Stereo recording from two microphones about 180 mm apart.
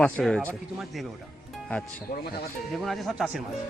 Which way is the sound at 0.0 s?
5° left (ahead or behind).